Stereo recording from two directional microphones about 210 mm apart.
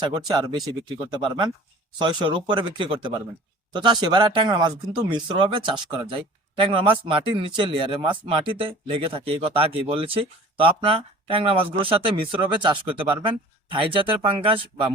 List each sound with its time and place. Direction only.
0.0 s speech: 20° right (ahead or behind)